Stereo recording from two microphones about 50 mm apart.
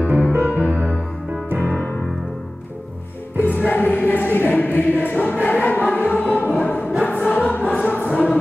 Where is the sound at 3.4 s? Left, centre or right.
Left.